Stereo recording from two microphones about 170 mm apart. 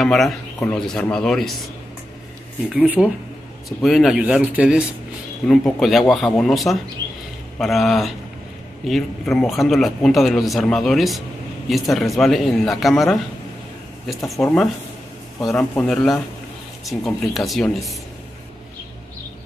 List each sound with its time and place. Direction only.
0.0 s speech: centre (ahead or behind)
2.7 s speech: 5° right (ahead or behind)
14.4 s speech: 10° left (ahead or behind)